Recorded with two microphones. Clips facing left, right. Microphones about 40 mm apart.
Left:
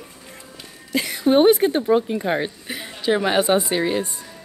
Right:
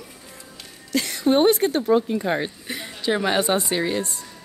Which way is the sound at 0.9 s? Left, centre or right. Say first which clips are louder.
Left 2 dB; centre.